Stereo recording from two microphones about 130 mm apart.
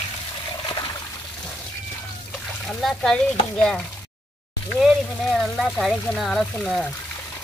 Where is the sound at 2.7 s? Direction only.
Centre (ahead or behind).